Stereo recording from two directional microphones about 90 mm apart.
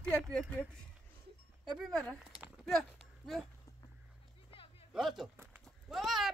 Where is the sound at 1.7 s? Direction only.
Centre (ahead or behind).